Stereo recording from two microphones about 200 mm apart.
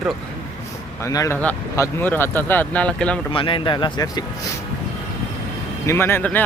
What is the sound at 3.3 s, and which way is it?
Speech, 25° left (ahead or behind).